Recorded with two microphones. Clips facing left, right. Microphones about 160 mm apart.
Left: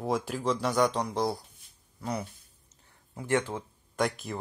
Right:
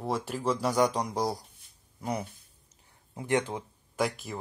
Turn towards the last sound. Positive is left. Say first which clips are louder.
# left 1 dB
turn(degrees=0)  # may be behind; listen again after turning